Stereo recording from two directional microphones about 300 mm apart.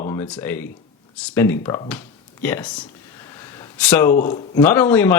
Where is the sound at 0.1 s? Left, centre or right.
Centre.